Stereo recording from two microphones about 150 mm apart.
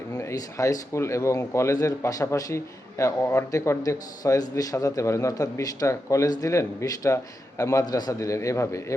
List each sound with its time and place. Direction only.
0.1 s a man's voice: 20° left (ahead or behind)